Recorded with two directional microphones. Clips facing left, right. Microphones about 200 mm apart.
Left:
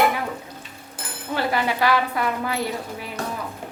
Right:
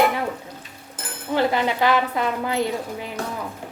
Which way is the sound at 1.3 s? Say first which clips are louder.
Right 3 dB; 20° right (ahead or behind).